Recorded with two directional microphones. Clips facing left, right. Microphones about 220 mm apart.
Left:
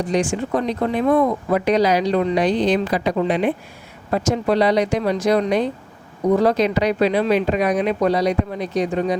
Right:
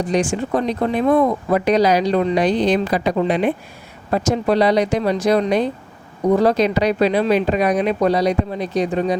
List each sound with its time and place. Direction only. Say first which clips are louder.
0.1 s speech: right 1 dB; 35° right (ahead or behind)